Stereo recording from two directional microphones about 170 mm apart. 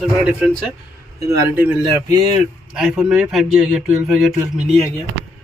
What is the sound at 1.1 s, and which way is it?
Speech, 20° right (ahead or behind).